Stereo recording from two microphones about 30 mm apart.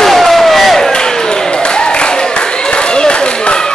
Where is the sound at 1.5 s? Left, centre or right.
Left.